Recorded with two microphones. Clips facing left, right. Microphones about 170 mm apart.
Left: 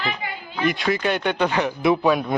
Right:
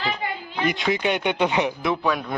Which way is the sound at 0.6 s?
20° right (ahead or behind).